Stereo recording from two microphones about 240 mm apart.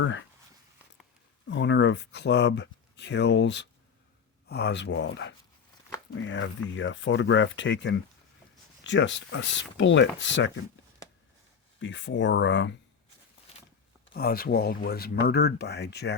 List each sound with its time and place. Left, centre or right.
0.0 s speech: left
1.5 s speech: left
11.8 s speech: left
14.1 s speech: left